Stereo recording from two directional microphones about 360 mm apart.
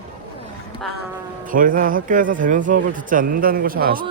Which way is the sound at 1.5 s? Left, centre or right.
Right.